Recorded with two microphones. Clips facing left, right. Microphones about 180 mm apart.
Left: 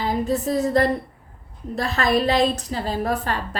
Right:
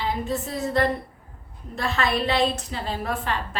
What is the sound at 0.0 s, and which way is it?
A woman's voice, 40° left (ahead or behind).